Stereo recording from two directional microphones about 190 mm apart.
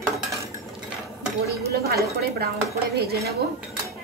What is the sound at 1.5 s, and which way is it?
Speech, 55° right (ahead or behind).